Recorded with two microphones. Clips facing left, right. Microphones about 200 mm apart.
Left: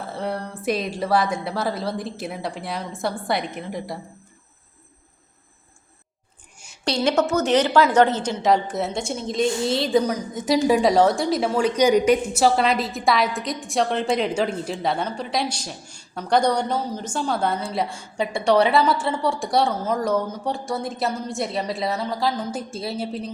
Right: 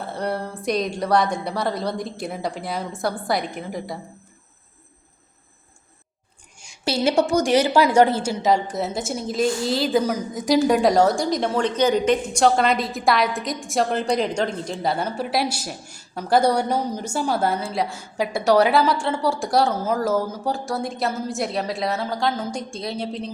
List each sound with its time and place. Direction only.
0.0 s a woman's voice: centre (ahead or behind)
6.8 s a woman's voice: 5° right (ahead or behind)